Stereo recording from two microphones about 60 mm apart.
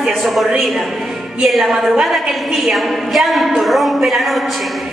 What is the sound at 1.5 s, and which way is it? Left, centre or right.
A woman's voice, centre.